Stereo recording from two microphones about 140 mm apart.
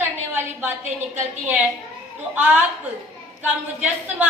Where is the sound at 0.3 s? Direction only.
15° right (ahead or behind).